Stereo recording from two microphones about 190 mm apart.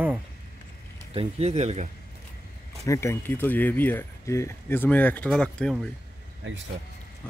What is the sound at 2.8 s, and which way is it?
Speech, 15° left (ahead or behind).